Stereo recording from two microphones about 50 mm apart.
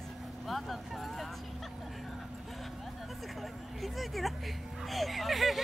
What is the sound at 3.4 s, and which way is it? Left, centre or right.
Speech, centre.